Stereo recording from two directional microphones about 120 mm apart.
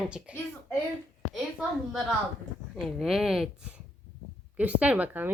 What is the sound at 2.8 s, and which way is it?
A woman's voice, centre (ahead or behind).